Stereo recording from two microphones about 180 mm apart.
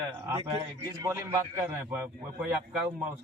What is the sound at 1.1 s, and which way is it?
A man's voice, 15° right (ahead or behind).